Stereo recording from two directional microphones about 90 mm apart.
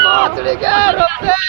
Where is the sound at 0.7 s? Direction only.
20° left (ahead or behind).